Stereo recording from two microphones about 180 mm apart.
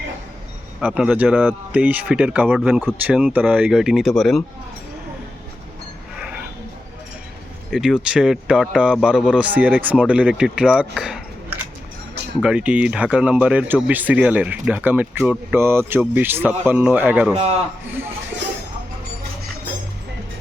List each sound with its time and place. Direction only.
0.8 s speech: 5° right (ahead or behind)
7.7 s speech: centre (ahead or behind)
17.3 s a man's voice: 35° right (ahead or behind)
17.8 s speech: 10° right (ahead or behind)